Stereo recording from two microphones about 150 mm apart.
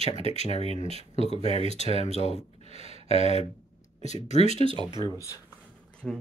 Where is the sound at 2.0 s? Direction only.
45° left (ahead or behind).